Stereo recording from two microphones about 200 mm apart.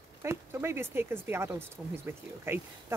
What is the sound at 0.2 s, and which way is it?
Speech, 10° right (ahead or behind).